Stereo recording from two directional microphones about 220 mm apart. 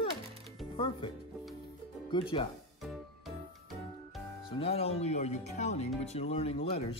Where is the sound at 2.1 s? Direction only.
20° left (ahead or behind).